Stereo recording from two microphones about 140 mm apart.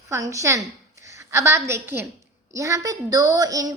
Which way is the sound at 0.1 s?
25° right (ahead or behind).